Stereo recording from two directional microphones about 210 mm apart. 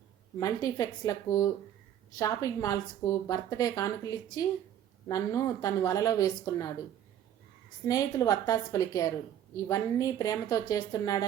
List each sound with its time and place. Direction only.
0.3 s a woman's voice: 15° left (ahead or behind)
7.9 s a woman's voice: 15° left (ahead or behind)